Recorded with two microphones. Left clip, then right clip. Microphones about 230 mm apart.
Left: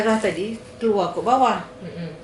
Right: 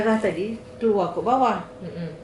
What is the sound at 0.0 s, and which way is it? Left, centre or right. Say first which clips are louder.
Speech: left 2 dB; centre.